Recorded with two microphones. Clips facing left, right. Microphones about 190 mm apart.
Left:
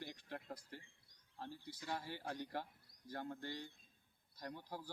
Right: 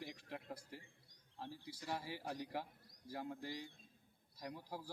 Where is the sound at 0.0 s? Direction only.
Centre (ahead or behind).